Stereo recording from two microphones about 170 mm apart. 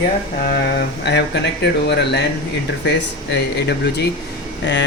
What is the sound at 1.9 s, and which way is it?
Speech, 90° left.